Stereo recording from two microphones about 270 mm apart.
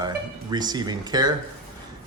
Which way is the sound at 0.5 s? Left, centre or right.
Centre.